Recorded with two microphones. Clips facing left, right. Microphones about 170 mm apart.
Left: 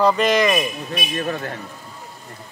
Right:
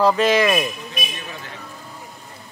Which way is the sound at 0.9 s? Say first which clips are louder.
Left 8 dB; 50° left (ahead or behind).